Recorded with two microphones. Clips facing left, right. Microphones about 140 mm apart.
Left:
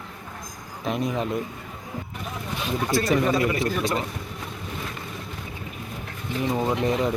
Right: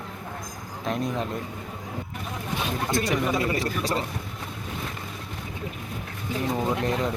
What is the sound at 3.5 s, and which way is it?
Speech, 35° right (ahead or behind).